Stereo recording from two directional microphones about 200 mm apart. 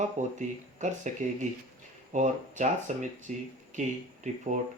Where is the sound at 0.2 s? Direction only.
40° right (ahead or behind).